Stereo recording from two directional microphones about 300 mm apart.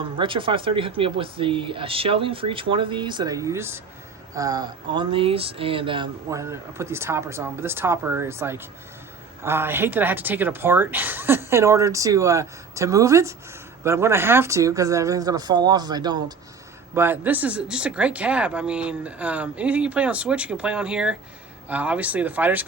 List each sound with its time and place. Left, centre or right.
0.0 s speech: centre